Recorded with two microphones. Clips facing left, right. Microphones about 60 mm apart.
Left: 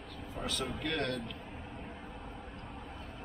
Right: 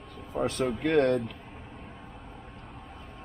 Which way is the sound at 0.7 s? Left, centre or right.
Centre.